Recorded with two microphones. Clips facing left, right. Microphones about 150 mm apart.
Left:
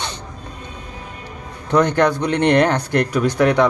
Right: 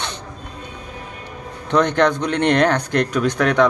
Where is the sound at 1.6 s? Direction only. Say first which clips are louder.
Left 1 dB; 10° left (ahead or behind).